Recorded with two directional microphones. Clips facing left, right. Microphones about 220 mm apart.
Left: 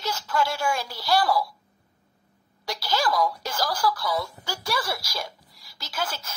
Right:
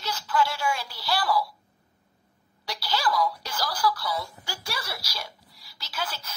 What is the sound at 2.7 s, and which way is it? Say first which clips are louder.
Speech: left 2 dB; 45° left (ahead or behind).